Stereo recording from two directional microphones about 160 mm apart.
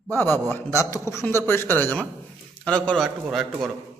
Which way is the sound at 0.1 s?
15° left (ahead or behind).